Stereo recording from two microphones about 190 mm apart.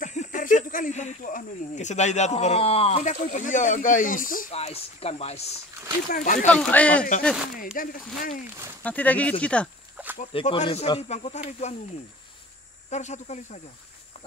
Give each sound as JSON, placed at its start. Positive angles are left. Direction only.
{"t": 0.0, "sound": "speech", "side_deg": 40}
{"t": 4.6, "sound": "speech", "side_deg": 30}
{"t": 6.0, "sound": "speech", "side_deg": 45}
{"t": 6.5, "sound": "speech", "side_deg": 5}
{"t": 7.7, "sound": "speech", "side_deg": 45}
{"t": 8.8, "sound": "speech", "side_deg": 10}
{"t": 10.3, "sound": "speech", "side_deg": 25}
{"t": 12.9, "sound": "speech", "side_deg": 35}